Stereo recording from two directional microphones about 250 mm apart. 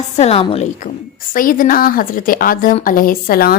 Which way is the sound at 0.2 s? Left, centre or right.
Left.